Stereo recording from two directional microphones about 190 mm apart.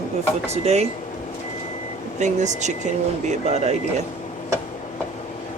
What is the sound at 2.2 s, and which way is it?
Speech, 40° right (ahead or behind).